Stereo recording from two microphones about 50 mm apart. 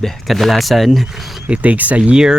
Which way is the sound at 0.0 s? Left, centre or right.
Centre.